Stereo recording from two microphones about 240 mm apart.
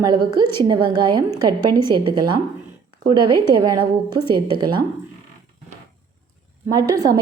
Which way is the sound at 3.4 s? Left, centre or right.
Centre.